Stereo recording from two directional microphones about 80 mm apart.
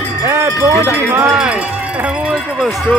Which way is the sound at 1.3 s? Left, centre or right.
Centre.